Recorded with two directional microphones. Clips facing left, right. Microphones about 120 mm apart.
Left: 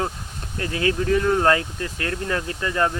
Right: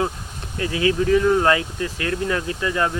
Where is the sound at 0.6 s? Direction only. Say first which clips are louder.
Right 3 dB; 45° left (ahead or behind).